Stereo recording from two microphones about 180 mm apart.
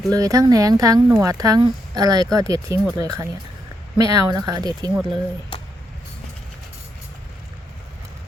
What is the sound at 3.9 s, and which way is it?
Speech, 20° right (ahead or behind).